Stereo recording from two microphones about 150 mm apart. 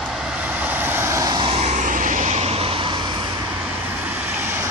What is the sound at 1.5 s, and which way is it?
Vehicle, 45° right (ahead or behind).